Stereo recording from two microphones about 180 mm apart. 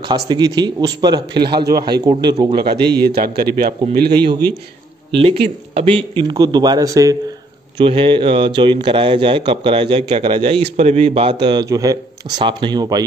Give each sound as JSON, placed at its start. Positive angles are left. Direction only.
{"t": 0.3, "sound": "speech", "side_deg": -25}
{"t": 2.5, "sound": "a man's voice", "side_deg": -60}
{"t": 5.2, "sound": "speech", "side_deg": -30}